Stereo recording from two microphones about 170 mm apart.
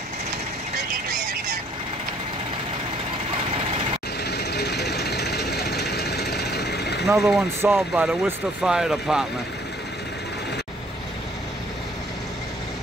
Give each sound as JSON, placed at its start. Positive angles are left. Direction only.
{"t": 4.2, "sound": "vehicle", "side_deg": 75}
{"t": 7.2, "sound": "speech", "side_deg": 0}